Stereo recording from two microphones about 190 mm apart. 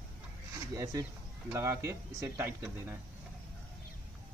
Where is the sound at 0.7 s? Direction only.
15° right (ahead or behind).